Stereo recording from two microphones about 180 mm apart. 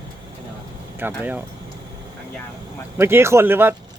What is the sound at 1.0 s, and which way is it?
Speech, 10° right (ahead or behind).